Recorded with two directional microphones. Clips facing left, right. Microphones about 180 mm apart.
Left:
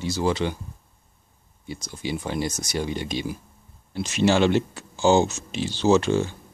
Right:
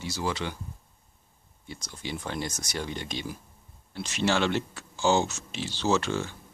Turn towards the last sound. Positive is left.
turn(degrees=15)  # may be behind; listen again after turning